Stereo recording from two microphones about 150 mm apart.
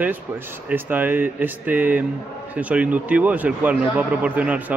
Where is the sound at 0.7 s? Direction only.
10° right (ahead or behind).